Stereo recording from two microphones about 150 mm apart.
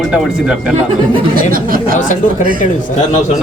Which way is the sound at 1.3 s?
75° right (ahead or behind).